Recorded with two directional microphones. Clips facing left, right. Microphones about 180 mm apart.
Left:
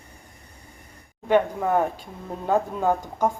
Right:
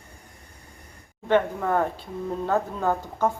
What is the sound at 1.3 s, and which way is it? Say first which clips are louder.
A woman's voice: left 2 dB; 10° left (ahead or behind).